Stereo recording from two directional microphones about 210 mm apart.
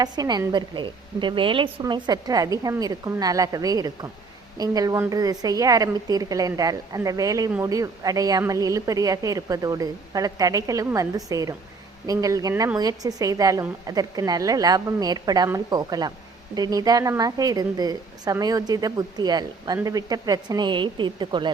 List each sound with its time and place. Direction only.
0.0 s a woman's voice: 20° right (ahead or behind)